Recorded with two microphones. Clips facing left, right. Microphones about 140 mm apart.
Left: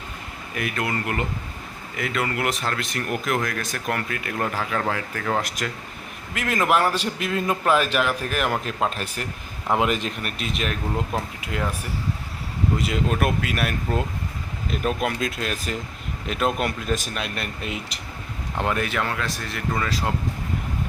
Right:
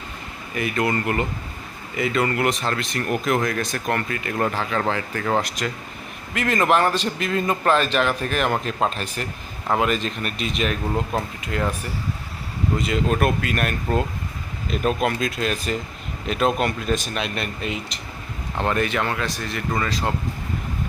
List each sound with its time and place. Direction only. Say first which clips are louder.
0.5 s a man's voice: right 4 dB; centre (ahead or behind)
9.6 s a man's voice: right 1 dB; 20° left (ahead or behind)
10.2 s speech: right 3 dB; 5° left (ahead or behind)
12.8 s speech: right 4 dB; 5° left (ahead or behind)